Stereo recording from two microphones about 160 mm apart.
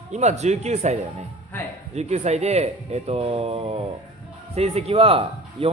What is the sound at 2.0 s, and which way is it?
Speech, 45° right (ahead or behind).